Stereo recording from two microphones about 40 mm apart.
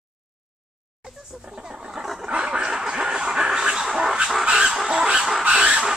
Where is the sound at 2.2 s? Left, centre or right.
Right.